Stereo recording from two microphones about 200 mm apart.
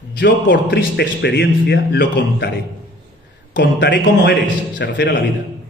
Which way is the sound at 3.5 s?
60° left (ahead or behind).